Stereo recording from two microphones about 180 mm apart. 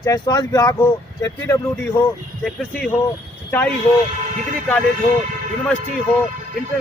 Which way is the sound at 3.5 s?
10° left (ahead or behind).